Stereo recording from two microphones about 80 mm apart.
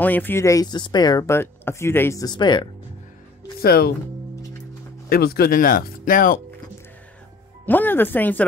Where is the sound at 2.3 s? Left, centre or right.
Left.